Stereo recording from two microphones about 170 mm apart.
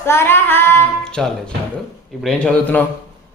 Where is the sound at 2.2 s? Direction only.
5° left (ahead or behind).